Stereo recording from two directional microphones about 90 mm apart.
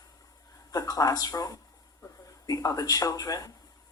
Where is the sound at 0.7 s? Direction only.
40° left (ahead or behind).